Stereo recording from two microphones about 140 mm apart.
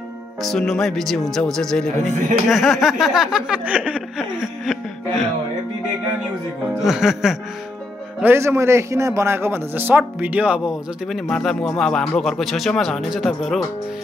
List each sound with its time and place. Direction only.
0.4 s speech: centre (ahead or behind)
6.8 s speech: 5° right (ahead or behind)
8.2 s a man's voice: 15° right (ahead or behind); by 13.7 s centre (ahead or behind)